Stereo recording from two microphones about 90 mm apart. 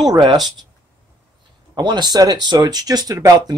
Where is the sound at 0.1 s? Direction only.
50° right (ahead or behind).